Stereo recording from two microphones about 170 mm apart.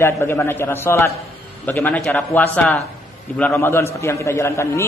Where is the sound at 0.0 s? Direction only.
15° left (ahead or behind).